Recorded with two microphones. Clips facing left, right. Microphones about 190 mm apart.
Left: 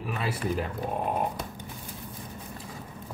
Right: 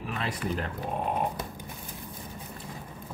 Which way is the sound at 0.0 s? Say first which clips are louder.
Left 2 dB; 5° left (ahead or behind).